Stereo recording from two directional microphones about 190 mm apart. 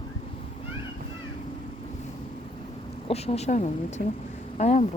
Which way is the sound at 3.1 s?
35° left (ahead or behind).